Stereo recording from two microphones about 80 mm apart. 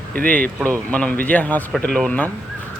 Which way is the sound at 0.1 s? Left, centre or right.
Centre.